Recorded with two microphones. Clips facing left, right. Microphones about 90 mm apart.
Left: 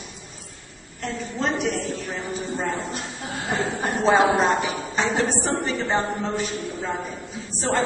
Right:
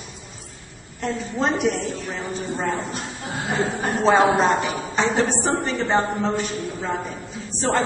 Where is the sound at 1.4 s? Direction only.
5° right (ahead or behind).